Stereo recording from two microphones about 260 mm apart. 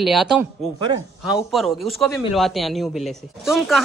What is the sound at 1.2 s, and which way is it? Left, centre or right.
Speech, centre.